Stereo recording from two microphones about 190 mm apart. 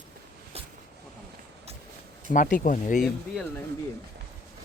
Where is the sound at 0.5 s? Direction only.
30° right (ahead or behind).